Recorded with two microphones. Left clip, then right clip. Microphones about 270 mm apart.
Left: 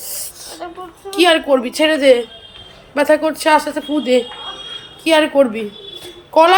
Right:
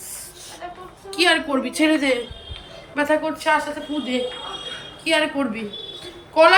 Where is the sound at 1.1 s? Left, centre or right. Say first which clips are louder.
Left 6 dB; centre.